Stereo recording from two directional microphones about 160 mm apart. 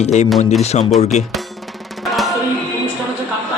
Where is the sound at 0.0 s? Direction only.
45° left (ahead or behind).